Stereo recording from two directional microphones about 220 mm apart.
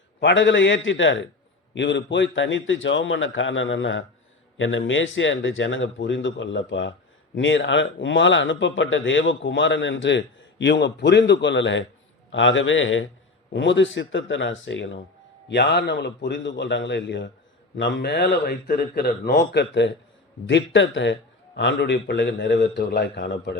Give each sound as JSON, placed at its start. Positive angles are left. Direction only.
{"t": 0.2, "sound": "a man's voice", "side_deg": 55}